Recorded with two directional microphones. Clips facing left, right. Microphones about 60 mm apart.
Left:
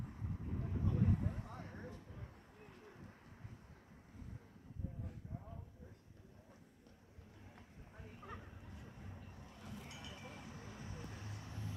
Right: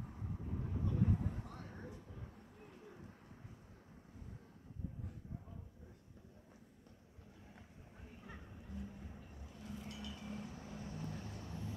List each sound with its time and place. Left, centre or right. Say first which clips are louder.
0.0 s vehicle: even; centre
2.1 s bird: right 1 dB; centre
8.2 s music: left 2 dB; centre
9.4 s vehicle: right 4 dB; centre
9.8 s vehicle: right 4 dB; left